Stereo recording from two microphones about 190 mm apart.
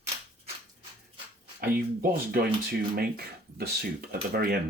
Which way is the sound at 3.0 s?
55° right (ahead or behind).